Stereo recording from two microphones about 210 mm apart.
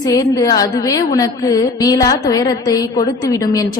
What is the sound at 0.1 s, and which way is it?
A woman's voice, 15° left (ahead or behind).